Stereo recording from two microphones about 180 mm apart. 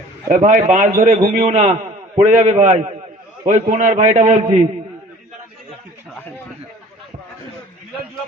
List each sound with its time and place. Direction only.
0.3 s a man's voice: 45° right (ahead or behind)